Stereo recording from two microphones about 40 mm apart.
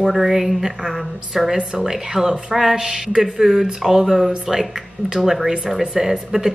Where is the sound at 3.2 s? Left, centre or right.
Centre.